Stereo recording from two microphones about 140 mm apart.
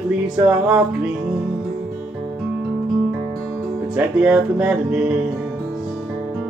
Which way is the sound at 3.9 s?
10° right (ahead or behind).